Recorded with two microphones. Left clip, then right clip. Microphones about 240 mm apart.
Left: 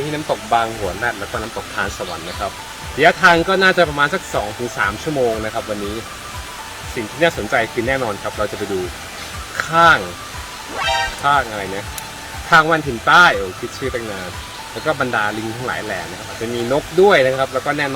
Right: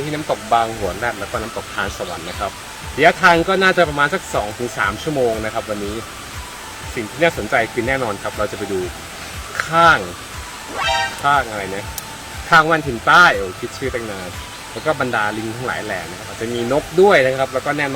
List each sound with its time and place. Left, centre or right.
0.3 s speech: centre
1.8 s speech: centre
3.0 s speech: centre
7.2 s speech: centre
9.6 s speech: centre
10.8 s music: centre
12.5 s speech: centre
14.8 s speech: centre